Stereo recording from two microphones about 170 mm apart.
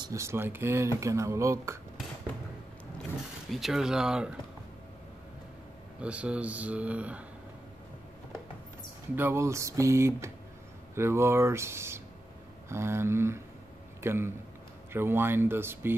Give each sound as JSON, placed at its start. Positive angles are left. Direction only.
{"t": 0.0, "sound": "speech", "side_deg": -15}
{"t": 3.4, "sound": "speech", "side_deg": 0}
{"t": 5.9, "sound": "speech", "side_deg": -5}
{"t": 9.1, "sound": "speech", "side_deg": -15}